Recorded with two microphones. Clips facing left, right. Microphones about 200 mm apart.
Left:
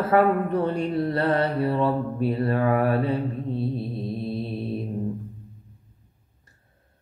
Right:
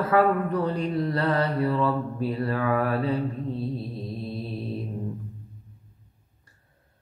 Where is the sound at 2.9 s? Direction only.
25° left (ahead or behind).